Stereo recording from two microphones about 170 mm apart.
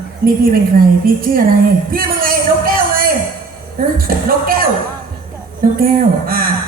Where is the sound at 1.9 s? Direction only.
60° right (ahead or behind).